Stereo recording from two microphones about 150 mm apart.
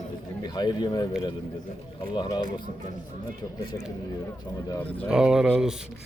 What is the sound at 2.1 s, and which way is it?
Speech, 30° left (ahead or behind).